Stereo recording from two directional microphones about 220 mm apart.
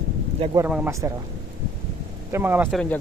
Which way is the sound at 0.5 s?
10° right (ahead or behind).